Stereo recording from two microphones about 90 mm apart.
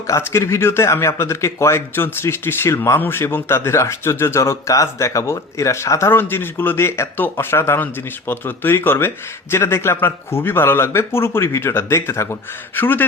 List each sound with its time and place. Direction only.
0.1 s speech: 30° left (ahead or behind)